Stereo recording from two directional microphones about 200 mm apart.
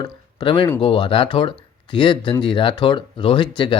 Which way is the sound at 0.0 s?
25° left (ahead or behind).